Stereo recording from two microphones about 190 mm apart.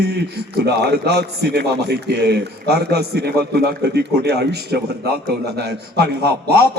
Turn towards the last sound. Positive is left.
turn(degrees=-60)  # may be behind; listen again after turning